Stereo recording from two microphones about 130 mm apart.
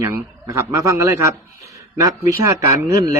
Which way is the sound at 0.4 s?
25° right (ahead or behind).